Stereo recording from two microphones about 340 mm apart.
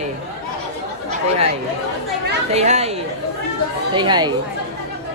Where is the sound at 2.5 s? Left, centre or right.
Centre.